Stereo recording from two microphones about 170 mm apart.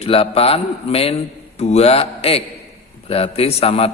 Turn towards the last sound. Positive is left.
turn(degrees=35)  # may be behind; listen again after turning